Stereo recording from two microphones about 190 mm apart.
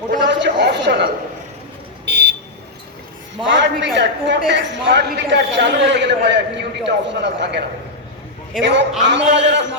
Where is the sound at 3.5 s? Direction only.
70° right (ahead or behind).